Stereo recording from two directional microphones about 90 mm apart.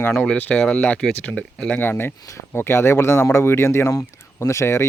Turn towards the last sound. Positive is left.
turn(degrees=30)  # may be behind; listen again after turning